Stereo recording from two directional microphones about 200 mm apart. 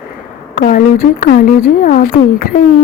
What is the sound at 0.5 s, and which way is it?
A woman's voice, 45° left (ahead or behind).